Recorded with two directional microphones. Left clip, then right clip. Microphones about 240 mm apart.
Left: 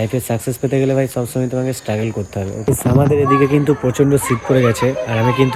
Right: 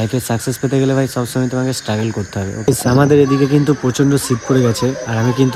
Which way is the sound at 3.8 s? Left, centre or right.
Centre.